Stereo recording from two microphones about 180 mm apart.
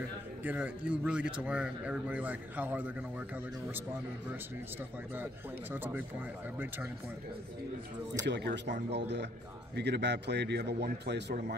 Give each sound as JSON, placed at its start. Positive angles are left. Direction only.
{"t": 0.4, "sound": "speech", "side_deg": -10}
{"t": 5.1, "sound": "speech", "side_deg": -10}
{"t": 8.3, "sound": "a man's voice", "side_deg": -70}